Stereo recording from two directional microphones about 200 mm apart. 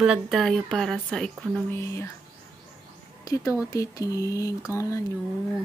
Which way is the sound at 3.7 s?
15° left (ahead or behind).